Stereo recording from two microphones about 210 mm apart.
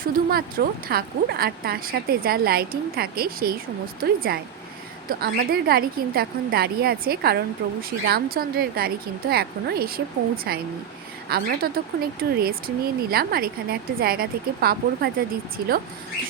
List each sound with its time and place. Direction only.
0.0 s a woman's voice: 45° right (ahead or behind)